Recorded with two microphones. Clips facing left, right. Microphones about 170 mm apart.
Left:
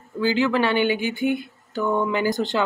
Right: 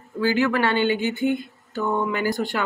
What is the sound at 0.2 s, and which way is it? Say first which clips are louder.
Speech: even; 20° left (ahead or behind).